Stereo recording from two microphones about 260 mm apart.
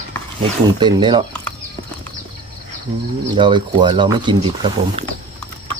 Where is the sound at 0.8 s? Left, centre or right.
Centre.